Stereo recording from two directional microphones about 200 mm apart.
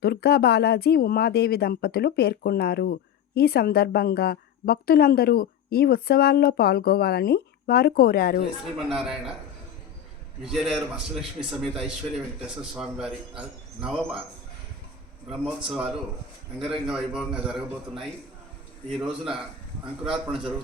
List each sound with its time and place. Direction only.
0.0 s speech: 50° left (ahead or behind)
8.9 s a man's voice: centre (ahead or behind)
10.4 s a man's voice: centre (ahead or behind)
12.5 s a man's voice: 5° right (ahead or behind)
15.3 s a man's voice: centre (ahead or behind)